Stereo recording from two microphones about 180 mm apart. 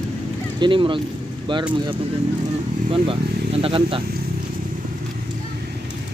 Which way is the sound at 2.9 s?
30° right (ahead or behind).